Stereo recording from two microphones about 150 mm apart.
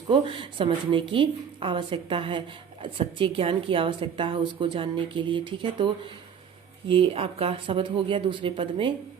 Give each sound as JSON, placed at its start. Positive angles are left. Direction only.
{"t": 0.1, "sound": "a woman's voice", "side_deg": -35}